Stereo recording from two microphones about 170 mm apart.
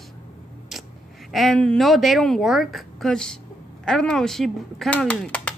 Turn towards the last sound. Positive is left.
turn(degrees=5)  # may be behind; listen again after turning